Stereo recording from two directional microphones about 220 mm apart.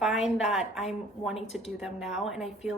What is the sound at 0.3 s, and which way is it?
A woman's voice, centre (ahead or behind).